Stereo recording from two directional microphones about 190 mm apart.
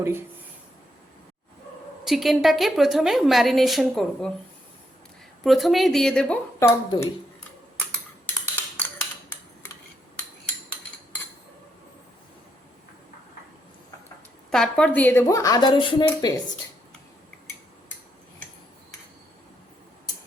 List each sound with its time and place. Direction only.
2.0 s a woman's voice: centre (ahead or behind)
5.4 s a woman's voice: centre (ahead or behind)
14.5 s a woman's voice: 5° left (ahead or behind); by 16.3 s 25° left (ahead or behind)